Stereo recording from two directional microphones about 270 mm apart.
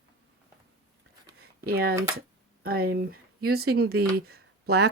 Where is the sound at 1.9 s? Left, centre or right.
Centre.